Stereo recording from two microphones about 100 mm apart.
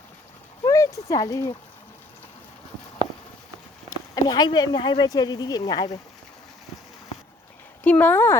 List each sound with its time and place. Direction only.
0.6 s a sound: 35° left (ahead or behind)
3.8 s speech: 40° left (ahead or behind)
7.9 s speech: 15° left (ahead or behind)